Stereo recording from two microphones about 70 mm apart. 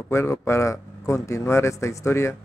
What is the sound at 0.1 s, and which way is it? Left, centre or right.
Speech, left.